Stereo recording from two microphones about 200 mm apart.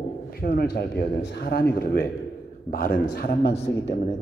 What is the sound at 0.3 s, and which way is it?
A man's voice, 50° left (ahead or behind).